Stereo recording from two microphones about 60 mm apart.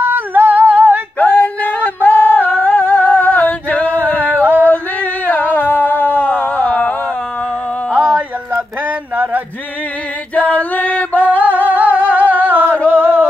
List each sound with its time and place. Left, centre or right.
0.0 s female singing: right
1.2 s a sound: left
4.4 s singing: right
5.2 s a sound: left
9.1 s male singing: right
10.3 s music: left
11.2 s singing: right
11.6 s humming: right
12.8 s music: right